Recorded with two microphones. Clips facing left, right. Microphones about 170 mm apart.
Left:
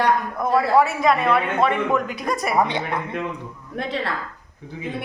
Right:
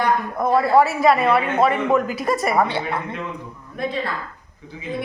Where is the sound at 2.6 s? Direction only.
15° left (ahead or behind).